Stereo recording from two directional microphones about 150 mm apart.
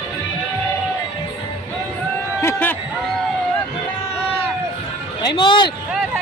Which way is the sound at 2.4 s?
10° left (ahead or behind).